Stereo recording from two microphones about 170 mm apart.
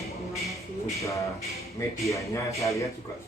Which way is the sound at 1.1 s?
20° left (ahead or behind).